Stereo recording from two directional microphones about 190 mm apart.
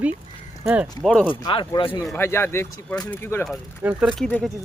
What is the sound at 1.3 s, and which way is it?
Speech, 25° left (ahead or behind).